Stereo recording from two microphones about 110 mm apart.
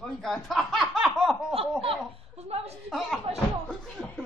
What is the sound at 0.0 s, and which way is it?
Snicker, 5° left (ahead or behind).